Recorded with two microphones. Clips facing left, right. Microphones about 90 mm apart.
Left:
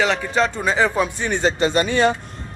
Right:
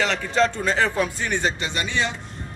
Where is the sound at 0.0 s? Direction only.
10° left (ahead or behind).